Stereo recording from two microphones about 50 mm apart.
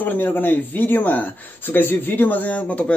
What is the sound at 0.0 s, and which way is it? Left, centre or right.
Speech, left.